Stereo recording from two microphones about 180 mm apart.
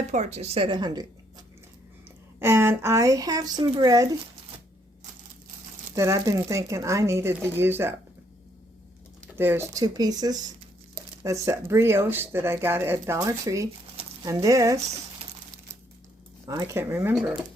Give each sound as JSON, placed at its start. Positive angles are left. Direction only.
{"t": 0.1, "sound": "a woman's voice", "side_deg": -40}
{"t": 2.4, "sound": "speech", "side_deg": -15}
{"t": 6.0, "sound": "speech", "side_deg": -15}
{"t": 9.3, "sound": "speech", "side_deg": -10}
{"t": 16.5, "sound": "speech", "side_deg": -15}